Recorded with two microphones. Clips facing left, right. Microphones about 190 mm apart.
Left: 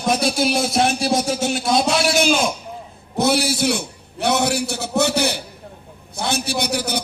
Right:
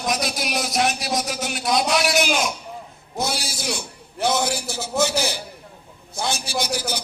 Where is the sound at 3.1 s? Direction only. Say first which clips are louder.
Left 9 dB; 60° left (ahead or behind).